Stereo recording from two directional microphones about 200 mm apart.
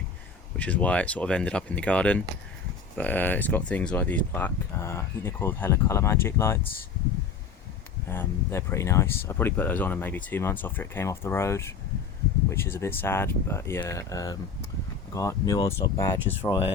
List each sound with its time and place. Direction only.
0.5 s speech: 5° left (ahead or behind)
8.1 s speech: 10° left (ahead or behind)